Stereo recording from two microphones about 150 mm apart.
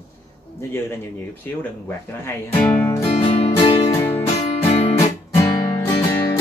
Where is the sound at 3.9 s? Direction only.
15° left (ahead or behind).